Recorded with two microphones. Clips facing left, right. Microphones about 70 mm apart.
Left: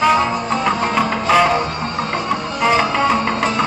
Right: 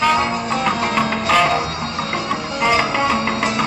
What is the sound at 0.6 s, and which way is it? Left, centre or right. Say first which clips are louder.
Music: left 2 dB; centre.